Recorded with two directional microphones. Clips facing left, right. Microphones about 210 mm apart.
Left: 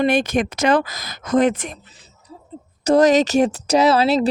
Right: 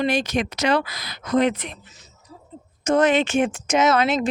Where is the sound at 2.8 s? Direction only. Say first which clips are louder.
Left 4 dB; 35° left (ahead or behind).